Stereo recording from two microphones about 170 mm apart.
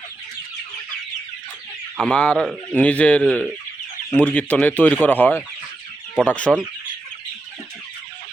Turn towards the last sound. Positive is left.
turn(degrees=10)  # may be behind; listen again after turning